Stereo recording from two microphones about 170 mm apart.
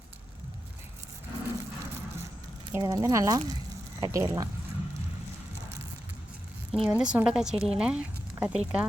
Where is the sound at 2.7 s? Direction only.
15° right (ahead or behind).